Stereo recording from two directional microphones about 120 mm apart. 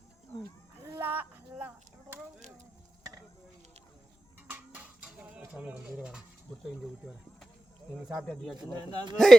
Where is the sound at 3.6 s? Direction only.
60° right (ahead or behind).